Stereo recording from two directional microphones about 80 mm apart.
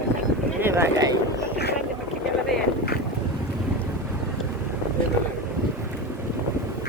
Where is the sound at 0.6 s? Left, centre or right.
Right.